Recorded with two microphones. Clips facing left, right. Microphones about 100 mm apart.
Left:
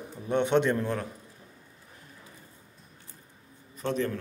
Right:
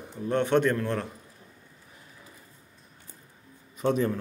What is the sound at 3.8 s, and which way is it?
Speech, 10° right (ahead or behind).